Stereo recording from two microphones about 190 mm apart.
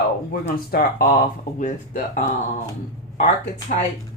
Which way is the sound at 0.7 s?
50° left (ahead or behind).